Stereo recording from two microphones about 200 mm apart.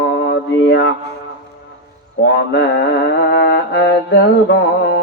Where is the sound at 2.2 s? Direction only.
55° left (ahead or behind).